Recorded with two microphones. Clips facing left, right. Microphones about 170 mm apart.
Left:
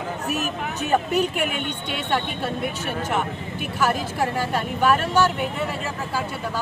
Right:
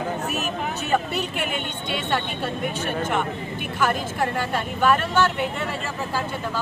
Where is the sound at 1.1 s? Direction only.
40° left (ahead or behind).